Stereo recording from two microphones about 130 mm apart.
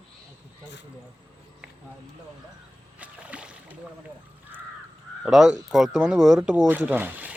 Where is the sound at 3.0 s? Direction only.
10° right (ahead or behind).